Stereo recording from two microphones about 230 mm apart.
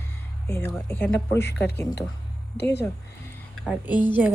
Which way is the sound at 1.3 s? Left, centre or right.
Left.